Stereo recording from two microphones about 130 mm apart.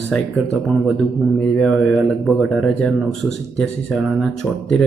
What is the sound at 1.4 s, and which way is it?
Speech, 5° left (ahead or behind).